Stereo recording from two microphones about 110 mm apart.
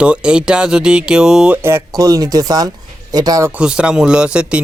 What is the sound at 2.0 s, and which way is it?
Speech, 35° right (ahead or behind).